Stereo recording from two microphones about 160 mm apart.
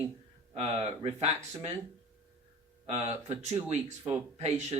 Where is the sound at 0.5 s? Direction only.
40° right (ahead or behind).